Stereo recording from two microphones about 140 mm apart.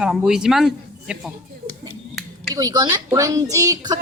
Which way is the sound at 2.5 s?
30° right (ahead or behind).